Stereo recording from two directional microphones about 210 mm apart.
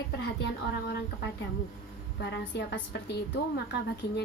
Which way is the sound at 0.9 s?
50° left (ahead or behind).